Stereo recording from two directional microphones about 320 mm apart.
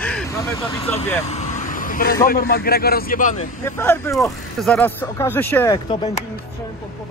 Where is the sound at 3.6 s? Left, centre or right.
Centre.